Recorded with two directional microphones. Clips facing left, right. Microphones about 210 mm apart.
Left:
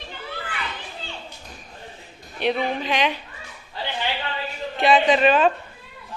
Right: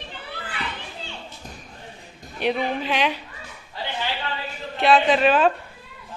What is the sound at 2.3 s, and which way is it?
Speech, 10° right (ahead or behind).